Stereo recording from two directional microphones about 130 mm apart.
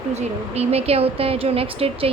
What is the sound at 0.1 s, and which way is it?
A woman's voice, 55° right (ahead or behind).